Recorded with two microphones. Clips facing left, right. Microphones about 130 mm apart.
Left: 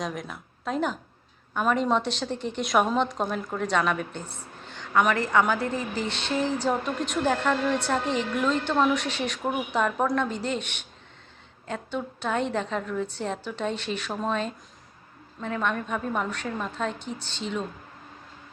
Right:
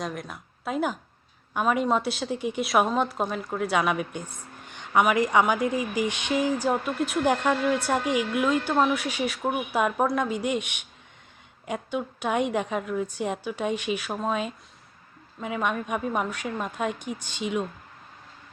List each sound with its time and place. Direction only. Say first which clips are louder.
0.0 s a woman's voice: left 1 dB; centre (ahead or behind)